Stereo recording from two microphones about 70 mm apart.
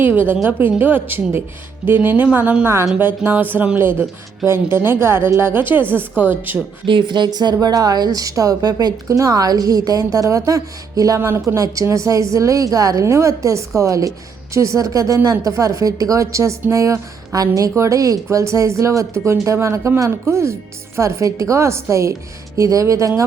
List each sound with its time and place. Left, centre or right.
0.4 s a woman's voice: right
2.6 s a woman's voice: right
4.4 s a woman's voice: right
7.1 s a woman's voice: right